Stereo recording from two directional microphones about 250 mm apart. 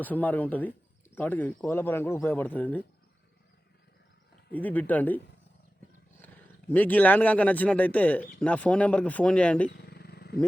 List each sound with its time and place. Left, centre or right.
0.0 s speech: centre
4.5 s speech: centre
6.2 s speech: centre
9.6 s vehicle: left